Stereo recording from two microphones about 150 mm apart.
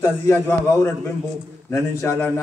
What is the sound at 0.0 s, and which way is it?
Speech, 15° left (ahead or behind).